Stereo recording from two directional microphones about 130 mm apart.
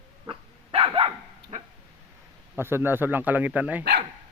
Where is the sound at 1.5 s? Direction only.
65° right (ahead or behind).